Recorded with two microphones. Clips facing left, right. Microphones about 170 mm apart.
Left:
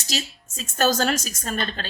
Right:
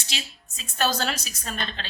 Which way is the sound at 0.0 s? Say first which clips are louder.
Left 7 dB; 40° left (ahead or behind).